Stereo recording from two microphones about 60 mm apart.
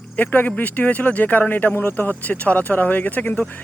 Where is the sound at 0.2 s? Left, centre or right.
Left.